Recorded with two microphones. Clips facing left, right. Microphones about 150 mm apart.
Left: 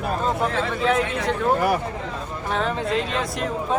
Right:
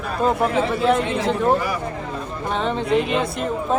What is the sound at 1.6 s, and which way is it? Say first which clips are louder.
Speech: left 3 dB; 60° left (ahead or behind).